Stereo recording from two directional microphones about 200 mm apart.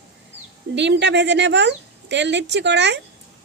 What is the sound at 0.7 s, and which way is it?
Speech, 60° right (ahead or behind).